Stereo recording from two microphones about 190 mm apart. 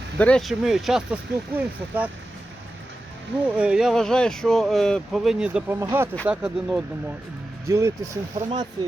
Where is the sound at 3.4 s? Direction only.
5° right (ahead or behind).